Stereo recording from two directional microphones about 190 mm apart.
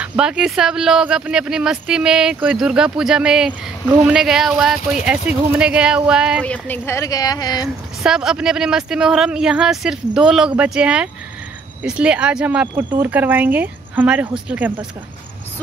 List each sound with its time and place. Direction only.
0.0 s speech: 5° right (ahead or behind)
6.4 s a woman's voice: 10° left (ahead or behind)
8.0 s speech: 5° right (ahead or behind)